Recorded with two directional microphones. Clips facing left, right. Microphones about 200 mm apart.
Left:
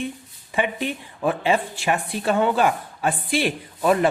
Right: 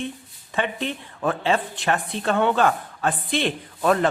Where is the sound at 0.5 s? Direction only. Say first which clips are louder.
Left 2 dB; 10° left (ahead or behind).